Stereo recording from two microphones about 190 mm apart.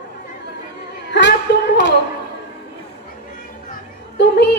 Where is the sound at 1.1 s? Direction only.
60° left (ahead or behind).